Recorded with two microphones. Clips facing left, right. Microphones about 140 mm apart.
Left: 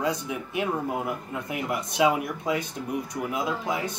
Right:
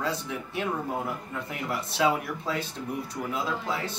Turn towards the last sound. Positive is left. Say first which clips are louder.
# left 2 dB
turn(degrees=15)  # may be behind; listen again after turning